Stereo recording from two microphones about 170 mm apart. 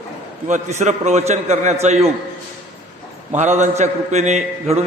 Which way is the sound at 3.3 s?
45° right (ahead or behind).